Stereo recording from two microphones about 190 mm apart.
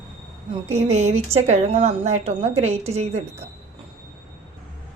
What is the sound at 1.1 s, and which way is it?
A woman's voice, 35° right (ahead or behind).